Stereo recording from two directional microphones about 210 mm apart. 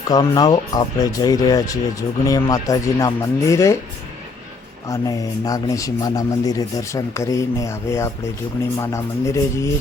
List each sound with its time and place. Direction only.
0.1 s speech: 20° left (ahead or behind)
4.9 s speech: 15° left (ahead or behind)